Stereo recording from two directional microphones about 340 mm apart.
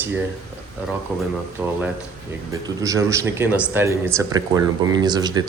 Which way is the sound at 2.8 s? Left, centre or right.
Centre.